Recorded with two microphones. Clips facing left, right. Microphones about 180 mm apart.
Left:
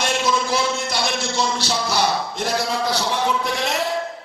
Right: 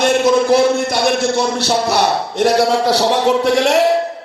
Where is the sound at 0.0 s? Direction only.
55° right (ahead or behind).